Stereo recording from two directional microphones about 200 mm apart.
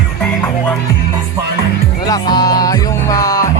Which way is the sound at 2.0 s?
20° left (ahead or behind).